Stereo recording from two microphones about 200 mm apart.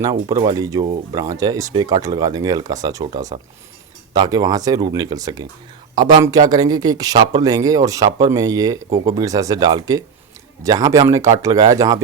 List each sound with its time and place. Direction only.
0.0 s speech: 20° right (ahead or behind)